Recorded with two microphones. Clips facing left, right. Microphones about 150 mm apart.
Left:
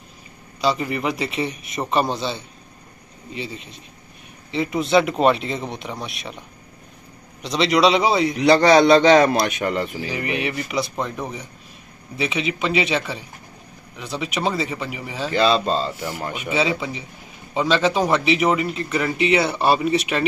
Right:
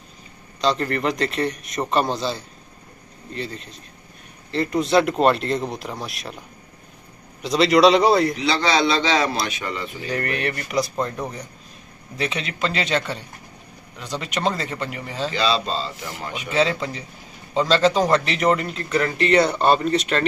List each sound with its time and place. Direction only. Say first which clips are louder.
0.6 s a man's voice: even; 5° left (ahead or behind)
7.4 s a man's voice: right 2 dB; centre (ahead or behind)
8.4 s a man's voice: left 7 dB; 55° left (ahead or behind)
9.9 s a man's voice: left 1 dB; 5° left (ahead or behind)
15.3 s a man's voice: left 5 dB; 50° left (ahead or behind)
16.1 s a man's voice: left 3 dB; 5° left (ahead or behind)